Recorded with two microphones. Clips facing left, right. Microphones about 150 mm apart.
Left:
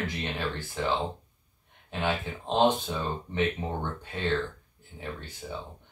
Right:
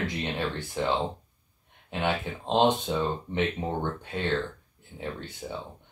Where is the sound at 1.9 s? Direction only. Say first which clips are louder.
Right 1 dB; 15° right (ahead or behind).